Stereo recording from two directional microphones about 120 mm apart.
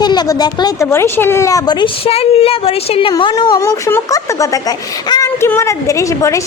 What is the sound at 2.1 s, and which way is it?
Speech, 55° left (ahead or behind).